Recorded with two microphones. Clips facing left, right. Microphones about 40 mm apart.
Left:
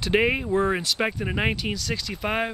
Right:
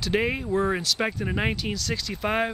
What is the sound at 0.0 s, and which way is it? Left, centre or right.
Speech, centre.